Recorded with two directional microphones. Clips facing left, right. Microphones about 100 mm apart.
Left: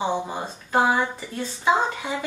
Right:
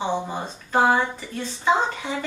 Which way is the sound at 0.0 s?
10° left (ahead or behind).